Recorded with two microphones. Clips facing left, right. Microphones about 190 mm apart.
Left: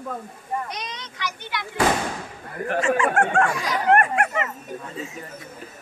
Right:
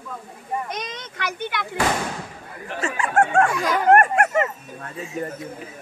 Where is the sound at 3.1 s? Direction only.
45° right (ahead or behind).